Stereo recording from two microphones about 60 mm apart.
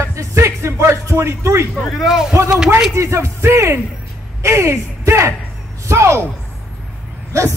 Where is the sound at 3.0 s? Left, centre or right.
Right.